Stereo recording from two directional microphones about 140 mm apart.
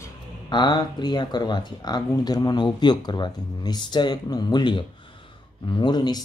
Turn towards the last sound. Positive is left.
turn(degrees=30)  # may be behind; listen again after turning